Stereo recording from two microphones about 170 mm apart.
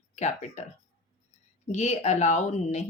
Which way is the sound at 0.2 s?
40° left (ahead or behind).